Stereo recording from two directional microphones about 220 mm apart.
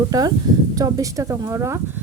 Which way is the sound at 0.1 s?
15° right (ahead or behind).